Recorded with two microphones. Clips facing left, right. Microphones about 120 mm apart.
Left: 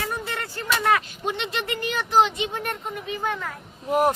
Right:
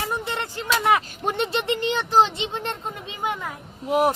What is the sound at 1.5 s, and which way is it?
Speech, 25° right (ahead or behind).